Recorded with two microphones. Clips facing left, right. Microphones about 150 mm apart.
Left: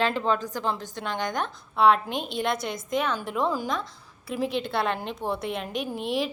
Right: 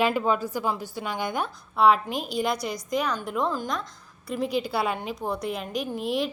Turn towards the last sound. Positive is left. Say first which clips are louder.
# right 1 dB
turn(degrees=0)  # may be behind; listen again after turning